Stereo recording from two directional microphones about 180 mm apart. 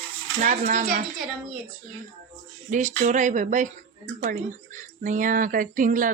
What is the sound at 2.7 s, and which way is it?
Speech, 45° right (ahead or behind).